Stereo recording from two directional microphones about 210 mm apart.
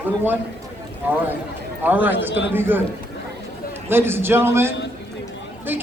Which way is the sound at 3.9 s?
10° right (ahead or behind).